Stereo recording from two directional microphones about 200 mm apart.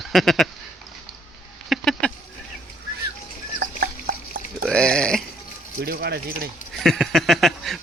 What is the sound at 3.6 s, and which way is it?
Drip, 50° right (ahead or behind).